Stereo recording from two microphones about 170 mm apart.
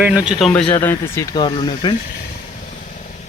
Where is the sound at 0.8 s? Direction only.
15° left (ahead or behind).